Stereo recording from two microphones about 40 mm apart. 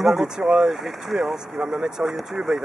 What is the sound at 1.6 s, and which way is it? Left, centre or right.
Speech, centre.